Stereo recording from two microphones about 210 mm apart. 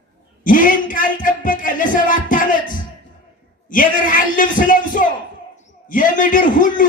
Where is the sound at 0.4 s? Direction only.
40° left (ahead or behind).